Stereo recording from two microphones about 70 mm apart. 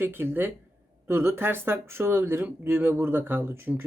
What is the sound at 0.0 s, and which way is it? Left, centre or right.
Speech, right.